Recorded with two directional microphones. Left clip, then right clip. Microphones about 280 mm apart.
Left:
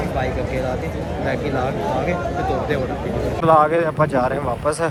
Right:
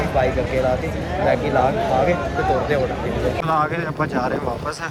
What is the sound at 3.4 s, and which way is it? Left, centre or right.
Speech, centre.